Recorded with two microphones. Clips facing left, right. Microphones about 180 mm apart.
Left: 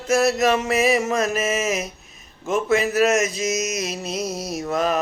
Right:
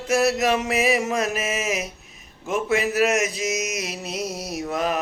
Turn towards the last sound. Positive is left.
turn(degrees=-15)  # may be behind; listen again after turning